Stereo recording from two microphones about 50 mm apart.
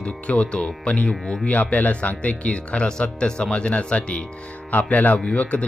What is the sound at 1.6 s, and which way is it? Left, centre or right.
Speech, left.